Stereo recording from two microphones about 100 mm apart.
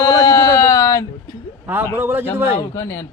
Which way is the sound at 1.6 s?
20° right (ahead or behind).